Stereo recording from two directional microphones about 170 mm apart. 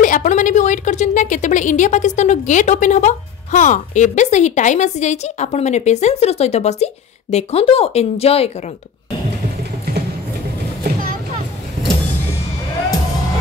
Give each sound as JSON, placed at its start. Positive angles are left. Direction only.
{"t": 0.0, "sound": "a woman's voice", "side_deg": 50}
{"t": 10.8, "sound": "boat", "side_deg": -60}